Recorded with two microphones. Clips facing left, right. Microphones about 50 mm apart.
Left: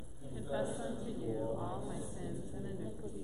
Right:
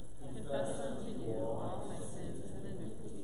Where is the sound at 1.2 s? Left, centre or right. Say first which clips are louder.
Even; left.